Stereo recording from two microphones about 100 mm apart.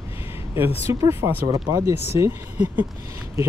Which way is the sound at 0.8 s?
30° right (ahead or behind).